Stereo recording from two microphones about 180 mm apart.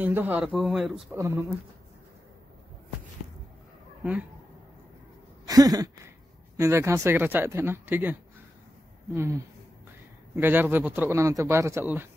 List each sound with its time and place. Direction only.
0.0 s a man's voice: 10° right (ahead or behind)
1.1 s a man's voice: 15° right (ahead or behind)
4.0 s speech: 10° right (ahead or behind)
5.5 s a sound: 20° right (ahead or behind)
6.6 s a man's voice: 15° right (ahead or behind)